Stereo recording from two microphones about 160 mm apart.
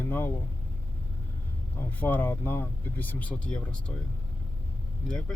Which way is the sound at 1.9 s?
10° left (ahead or behind).